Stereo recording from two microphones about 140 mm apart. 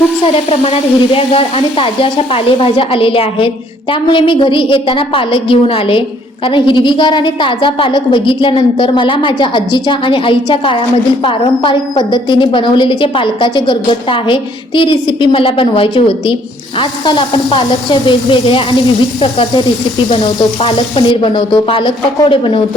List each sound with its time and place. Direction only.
0.6 s a woman's voice: 45° left (ahead or behind)